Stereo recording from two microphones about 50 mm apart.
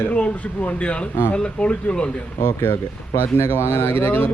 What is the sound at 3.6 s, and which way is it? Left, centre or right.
Speech, left.